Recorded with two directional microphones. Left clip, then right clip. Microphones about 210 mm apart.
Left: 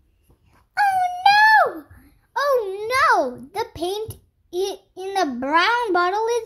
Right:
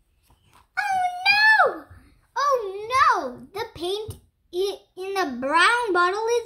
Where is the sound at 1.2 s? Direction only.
50° left (ahead or behind).